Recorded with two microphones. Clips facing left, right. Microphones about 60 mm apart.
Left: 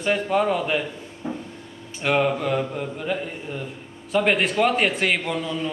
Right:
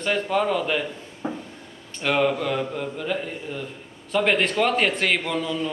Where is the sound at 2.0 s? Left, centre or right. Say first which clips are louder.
Left 1 dB; centre.